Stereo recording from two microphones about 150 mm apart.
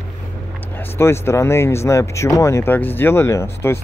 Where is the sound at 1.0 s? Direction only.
15° left (ahead or behind).